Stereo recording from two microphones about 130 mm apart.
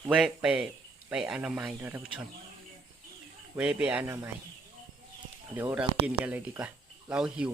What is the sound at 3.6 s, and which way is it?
Speech, 10° right (ahead or behind).